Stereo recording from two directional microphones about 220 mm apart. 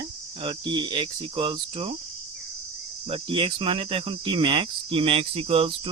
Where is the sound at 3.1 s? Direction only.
25° right (ahead or behind).